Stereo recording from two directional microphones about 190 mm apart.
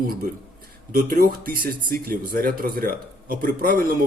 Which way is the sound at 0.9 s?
50° right (ahead or behind).